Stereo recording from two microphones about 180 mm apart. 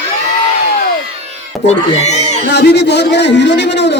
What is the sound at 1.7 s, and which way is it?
Speech, 40° left (ahead or behind).